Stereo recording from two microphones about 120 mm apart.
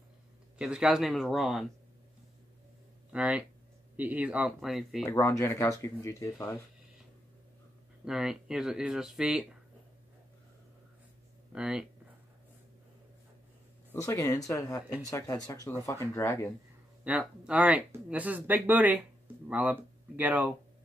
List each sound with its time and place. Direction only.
0.6 s speech: 10° right (ahead or behind)
3.1 s speech: 10° right (ahead or behind)
5.1 s speech: 25° left (ahead or behind)
8.0 s speech: 5° right (ahead or behind)
11.5 s speech: 5° right (ahead or behind)
14.0 s speech: 25° left (ahead or behind)
17.2 s speech: 10° right (ahead or behind)